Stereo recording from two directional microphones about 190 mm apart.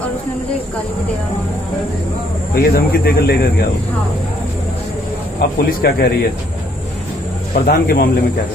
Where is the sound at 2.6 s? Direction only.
55° left (ahead or behind).